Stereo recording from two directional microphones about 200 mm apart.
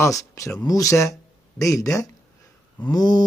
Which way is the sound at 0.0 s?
15° left (ahead or behind).